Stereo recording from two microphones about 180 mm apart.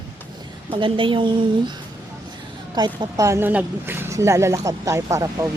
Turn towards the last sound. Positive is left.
turn(degrees=-15)  # may be behind; listen again after turning